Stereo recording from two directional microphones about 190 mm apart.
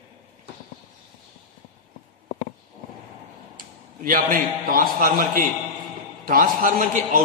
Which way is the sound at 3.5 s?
50° right (ahead or behind).